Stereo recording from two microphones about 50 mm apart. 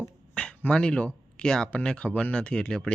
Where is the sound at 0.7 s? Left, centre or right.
Centre.